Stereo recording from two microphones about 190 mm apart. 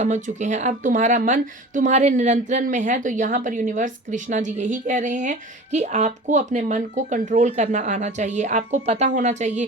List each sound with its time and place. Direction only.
0.0 s speech: 40° right (ahead or behind)